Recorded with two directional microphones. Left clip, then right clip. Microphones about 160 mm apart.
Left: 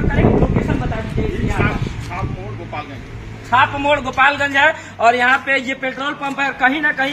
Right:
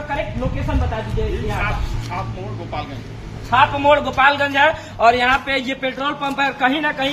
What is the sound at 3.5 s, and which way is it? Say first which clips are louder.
A man's voice: right 1 dB; 15° left (ahead or behind).